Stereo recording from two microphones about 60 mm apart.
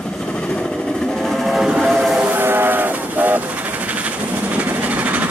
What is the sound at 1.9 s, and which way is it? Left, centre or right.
Train, centre.